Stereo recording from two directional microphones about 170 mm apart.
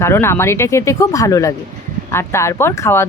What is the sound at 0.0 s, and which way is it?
Speech, 15° left (ahead or behind).